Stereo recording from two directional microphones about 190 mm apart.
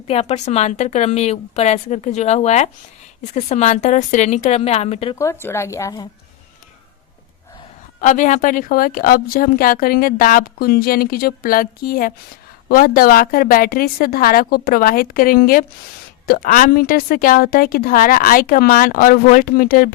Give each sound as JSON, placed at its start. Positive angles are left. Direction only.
{"t": 0.1, "sound": "a woman's voice", "side_deg": 35}
{"t": 5.1, "sound": "a woman's voice", "side_deg": 15}
{"t": 8.0, "sound": "a woman's voice", "side_deg": 40}